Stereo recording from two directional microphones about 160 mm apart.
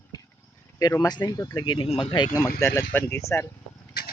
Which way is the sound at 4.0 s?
85° left.